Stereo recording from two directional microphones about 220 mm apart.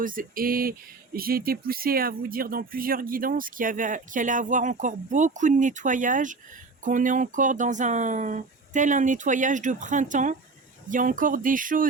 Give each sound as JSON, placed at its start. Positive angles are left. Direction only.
{"t": 0.0, "sound": "speech", "side_deg": -40}